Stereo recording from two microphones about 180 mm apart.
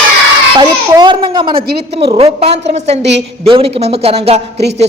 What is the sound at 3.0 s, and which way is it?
Speech, 75° right (ahead or behind).